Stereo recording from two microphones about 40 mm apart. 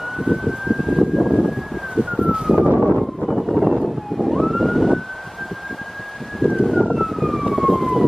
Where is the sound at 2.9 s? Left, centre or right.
Centre.